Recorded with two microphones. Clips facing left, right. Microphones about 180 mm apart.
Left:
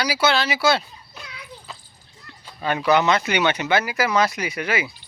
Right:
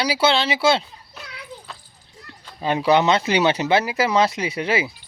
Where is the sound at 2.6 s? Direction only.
30° right (ahead or behind).